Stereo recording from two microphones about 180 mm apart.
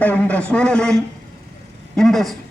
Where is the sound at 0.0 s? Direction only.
10° left (ahead or behind).